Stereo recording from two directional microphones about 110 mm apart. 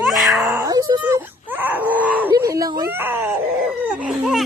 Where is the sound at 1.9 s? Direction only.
15° right (ahead or behind).